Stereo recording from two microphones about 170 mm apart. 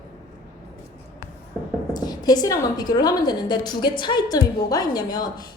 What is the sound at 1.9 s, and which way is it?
A woman's voice, 25° left (ahead or behind).